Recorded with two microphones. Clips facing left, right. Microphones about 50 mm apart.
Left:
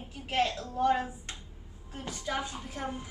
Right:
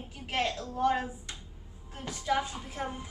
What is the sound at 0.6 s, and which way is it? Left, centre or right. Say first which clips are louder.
Speech: even; left.